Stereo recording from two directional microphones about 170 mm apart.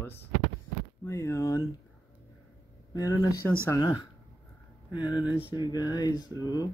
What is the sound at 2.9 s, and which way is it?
Speech, 20° left (ahead or behind).